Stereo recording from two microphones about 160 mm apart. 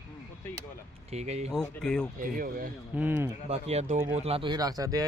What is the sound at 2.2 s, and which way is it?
Speech, 60° right (ahead or behind).